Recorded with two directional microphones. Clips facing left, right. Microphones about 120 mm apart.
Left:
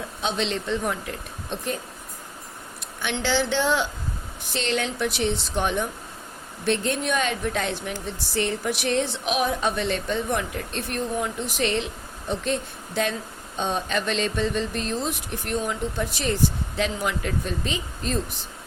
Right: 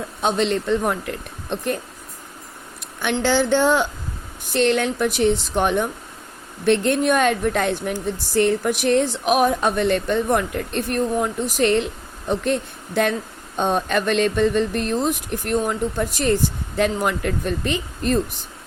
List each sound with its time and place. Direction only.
0.2 s speech: 50° right (ahead or behind)
3.0 s speech: 50° right (ahead or behind)